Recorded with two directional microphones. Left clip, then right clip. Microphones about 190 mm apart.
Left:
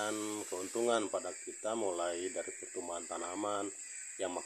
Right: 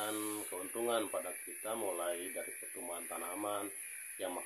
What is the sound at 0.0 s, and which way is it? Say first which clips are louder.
Speech: left 2 dB; 50° left (ahead or behind).